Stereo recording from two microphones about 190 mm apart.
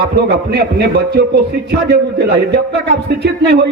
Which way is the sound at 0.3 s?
60° right (ahead or behind).